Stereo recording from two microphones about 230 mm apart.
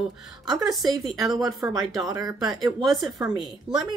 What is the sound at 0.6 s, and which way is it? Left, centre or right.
Speech, centre.